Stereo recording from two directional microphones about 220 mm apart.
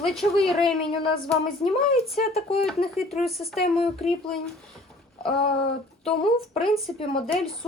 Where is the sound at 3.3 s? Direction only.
Centre (ahead or behind).